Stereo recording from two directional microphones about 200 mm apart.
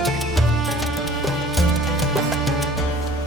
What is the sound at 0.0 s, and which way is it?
Music, centre (ahead or behind).